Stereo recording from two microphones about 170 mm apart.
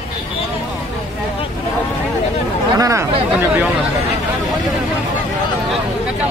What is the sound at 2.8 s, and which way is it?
Speech, 15° right (ahead or behind).